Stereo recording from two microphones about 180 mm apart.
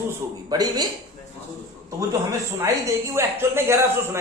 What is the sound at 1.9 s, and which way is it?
A man's voice, 15° right (ahead or behind).